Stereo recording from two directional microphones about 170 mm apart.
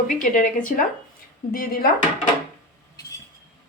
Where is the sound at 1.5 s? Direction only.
60° left (ahead or behind).